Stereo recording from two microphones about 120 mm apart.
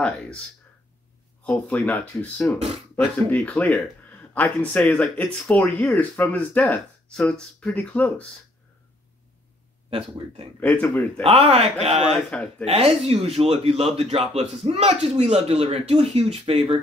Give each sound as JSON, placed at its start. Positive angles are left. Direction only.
{"t": 1.4, "sound": "speech", "side_deg": 10}
{"t": 9.8, "sound": "speech", "side_deg": -55}
{"t": 10.6, "sound": "speech", "side_deg": 10}
{"t": 11.2, "sound": "speech", "side_deg": -50}
{"t": 12.3, "sound": "speech", "side_deg": 10}
{"t": 12.6, "sound": "speech", "side_deg": -55}